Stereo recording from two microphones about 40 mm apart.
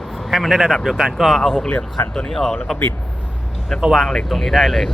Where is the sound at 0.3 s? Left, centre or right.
Centre.